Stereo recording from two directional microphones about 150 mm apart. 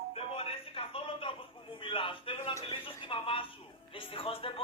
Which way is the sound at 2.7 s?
35° left (ahead or behind).